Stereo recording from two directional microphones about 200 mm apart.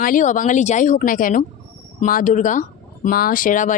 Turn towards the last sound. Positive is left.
turn(degrees=40)  # may be behind; listen again after turning